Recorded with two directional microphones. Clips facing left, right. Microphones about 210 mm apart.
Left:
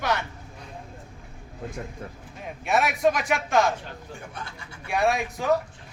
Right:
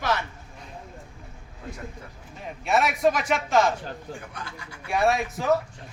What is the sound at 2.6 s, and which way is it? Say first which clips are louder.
A man's voice: even; centre (ahead or behind).